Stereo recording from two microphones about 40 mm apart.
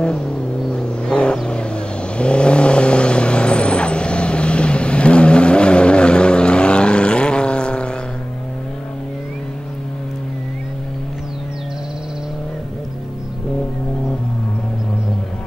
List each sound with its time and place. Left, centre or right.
0.0 s vehicle: left